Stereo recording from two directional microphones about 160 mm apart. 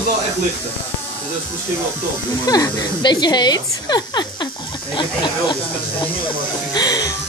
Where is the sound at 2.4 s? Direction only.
25° left (ahead or behind).